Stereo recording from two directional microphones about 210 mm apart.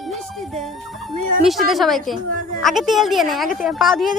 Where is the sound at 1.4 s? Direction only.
Centre (ahead or behind).